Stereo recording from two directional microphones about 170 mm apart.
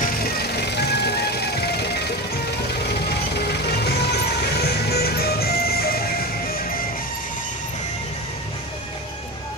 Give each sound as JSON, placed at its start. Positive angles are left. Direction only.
{"t": 0.0, "sound": "music", "side_deg": 70}